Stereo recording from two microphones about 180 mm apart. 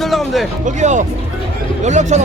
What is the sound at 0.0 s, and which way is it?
Music, centre (ahead or behind).